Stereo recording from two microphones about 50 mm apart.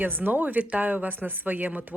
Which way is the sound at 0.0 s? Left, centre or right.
Right.